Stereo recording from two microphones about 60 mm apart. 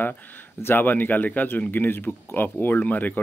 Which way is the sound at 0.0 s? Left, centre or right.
Left.